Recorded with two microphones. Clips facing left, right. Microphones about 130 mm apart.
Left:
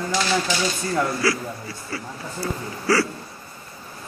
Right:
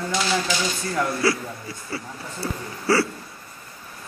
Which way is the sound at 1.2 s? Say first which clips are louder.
Right 3 dB; 25° right (ahead or behind).